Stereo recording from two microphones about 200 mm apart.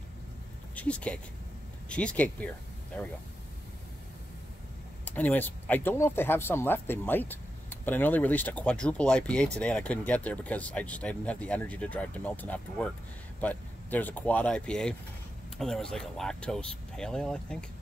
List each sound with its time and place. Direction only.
0.7 s speech: 5° left (ahead or behind)
5.0 s speech: 10° left (ahead or behind)